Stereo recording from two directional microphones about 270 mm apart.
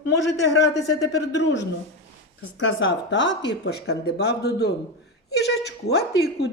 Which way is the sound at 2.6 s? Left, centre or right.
Left.